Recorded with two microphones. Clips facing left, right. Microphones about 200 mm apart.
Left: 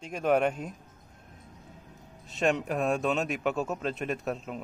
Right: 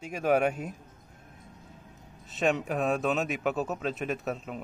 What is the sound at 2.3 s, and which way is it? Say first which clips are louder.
Speech: even; centre (ahead or behind).